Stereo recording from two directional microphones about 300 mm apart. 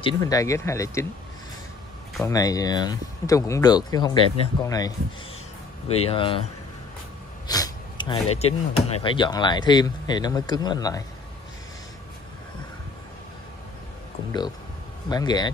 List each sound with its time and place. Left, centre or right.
0.0 s speech: centre
2.1 s speech: centre
7.4 s a sound: centre
8.4 s speech: left
15.0 s speech: centre